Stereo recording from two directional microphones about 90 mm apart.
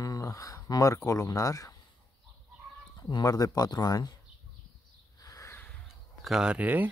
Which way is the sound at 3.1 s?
40° left (ahead or behind).